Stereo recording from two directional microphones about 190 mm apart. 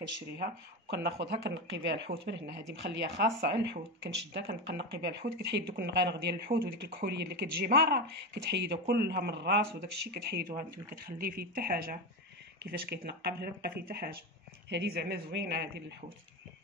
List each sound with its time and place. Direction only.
0.0 s speech: 65° right (ahead or behind)
10.9 s speech: 50° right (ahead or behind)